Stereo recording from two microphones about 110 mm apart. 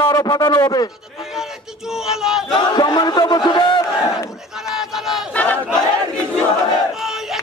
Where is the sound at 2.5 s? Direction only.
40° left (ahead or behind).